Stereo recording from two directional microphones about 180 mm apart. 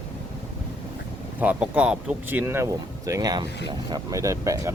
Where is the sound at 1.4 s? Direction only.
10° right (ahead or behind).